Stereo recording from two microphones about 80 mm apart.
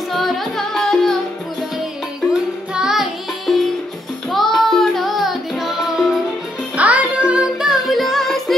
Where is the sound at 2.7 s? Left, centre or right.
Centre.